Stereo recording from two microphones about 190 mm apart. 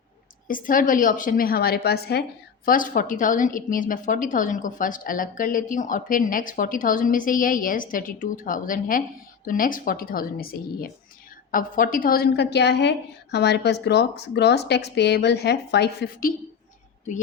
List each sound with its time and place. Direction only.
0.4 s a woman's voice: 45° left (ahead or behind)
2.6 s a woman's voice: 45° left (ahead or behind)